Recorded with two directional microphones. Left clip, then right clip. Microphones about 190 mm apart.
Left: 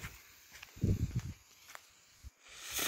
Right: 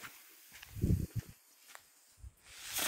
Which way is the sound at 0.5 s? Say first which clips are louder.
Left 1 dB; 50° left (ahead or behind).